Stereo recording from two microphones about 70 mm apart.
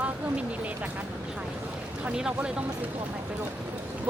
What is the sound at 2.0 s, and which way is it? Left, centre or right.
Speech, centre.